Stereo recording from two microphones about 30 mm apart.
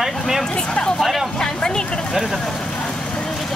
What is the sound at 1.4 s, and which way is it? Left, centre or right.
Speech, left.